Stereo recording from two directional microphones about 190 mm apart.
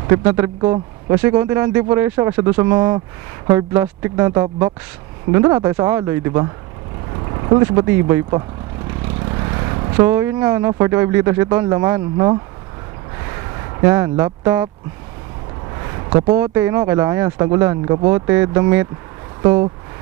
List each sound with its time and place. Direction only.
0.0 s speech: 15° right (ahead or behind)
0.6 s speech: 25° right (ahead or behind)
1.1 s speech: 10° right (ahead or behind)
9.2 s vehicle: 20° right (ahead or behind)
10.0 s speech: 10° right (ahead or behind)
13.7 s speech: 15° right (ahead or behind)
16.3 s speech: 15° right (ahead or behind)